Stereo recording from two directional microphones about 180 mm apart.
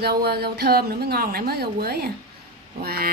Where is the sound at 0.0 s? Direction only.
65° right (ahead or behind).